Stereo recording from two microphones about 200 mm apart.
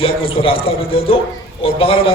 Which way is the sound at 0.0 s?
25° left (ahead or behind).